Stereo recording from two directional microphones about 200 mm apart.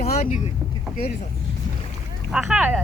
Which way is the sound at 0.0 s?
35° left (ahead or behind).